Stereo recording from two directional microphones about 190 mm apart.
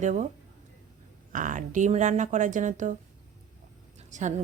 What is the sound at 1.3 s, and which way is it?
Speech, 45° right (ahead or behind).